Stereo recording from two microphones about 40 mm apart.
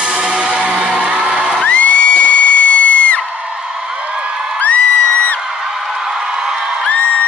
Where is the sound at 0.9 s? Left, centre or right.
Right.